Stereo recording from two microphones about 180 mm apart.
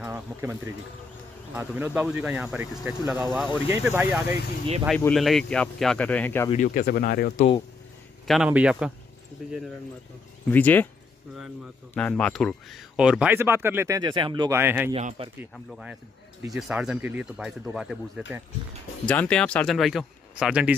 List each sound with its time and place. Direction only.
0.0 s a sound: 10° right (ahead or behind)
1.5 s speech: 10° right (ahead or behind)
5.1 s speech: centre (ahead or behind)
6.5 s speech: 50° left (ahead or behind)
8.3 s speech: 5° right (ahead or behind)
10.5 s speech: 10° left (ahead or behind)
11.9 s speech: 5° left (ahead or behind); by 14.6 s 25° right (ahead or behind)
14.6 s speech: 10° right (ahead or behind)
15.0 s a man's voice: 40° right (ahead or behind)
15.5 s speech: 5° right (ahead or behind)